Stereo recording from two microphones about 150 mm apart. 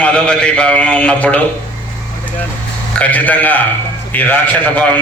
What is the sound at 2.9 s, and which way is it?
A man's voice, 10° left (ahead or behind).